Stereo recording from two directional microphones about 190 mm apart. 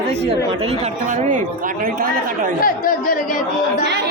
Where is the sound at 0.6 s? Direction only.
35° right (ahead or behind).